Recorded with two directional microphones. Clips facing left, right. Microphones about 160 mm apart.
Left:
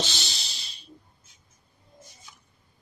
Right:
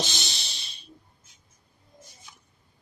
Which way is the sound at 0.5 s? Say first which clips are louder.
Right 1 dB; 60° right (ahead or behind).